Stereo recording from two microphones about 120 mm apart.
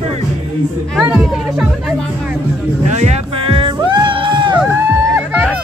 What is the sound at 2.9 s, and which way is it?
Music, 75° right (ahead or behind).